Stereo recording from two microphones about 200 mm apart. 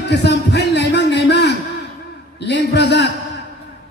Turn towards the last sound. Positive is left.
turn(degrees=60)  # may be behind; listen again after turning